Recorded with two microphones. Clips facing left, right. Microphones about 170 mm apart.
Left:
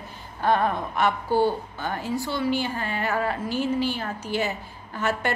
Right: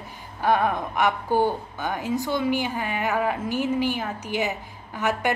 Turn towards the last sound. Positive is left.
turn(degrees=-15)  # may be behind; listen again after turning